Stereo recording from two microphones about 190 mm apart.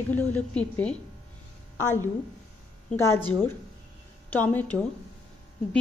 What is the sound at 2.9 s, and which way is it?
Speech, 15° left (ahead or behind).